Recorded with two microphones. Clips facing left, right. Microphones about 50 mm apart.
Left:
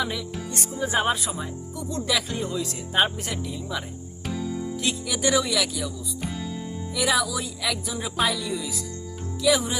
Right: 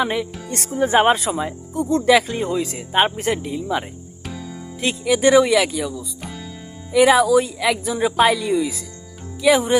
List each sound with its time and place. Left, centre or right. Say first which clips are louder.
0.0 s speech: right 7 dB; right
0.4 s speech: right 8 dB; right
1.3 s speech: right 9 dB; right
1.7 s speech: right 12 dB; right
4.3 s music: left 4 dB; centre
4.8 s speech: right 11 dB; right
6.2 s music: left 2 dB; centre
6.9 s speech: right 12 dB; right